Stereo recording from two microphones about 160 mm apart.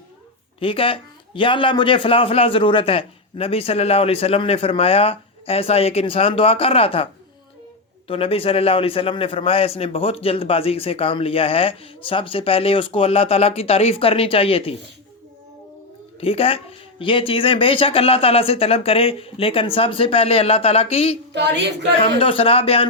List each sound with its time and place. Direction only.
0.6 s a man's voice: 35° left (ahead or behind)
16.2 s a man's voice: 35° left (ahead or behind)
21.3 s a woman's voice: 90° right
22.0 s a man's voice: 35° left (ahead or behind)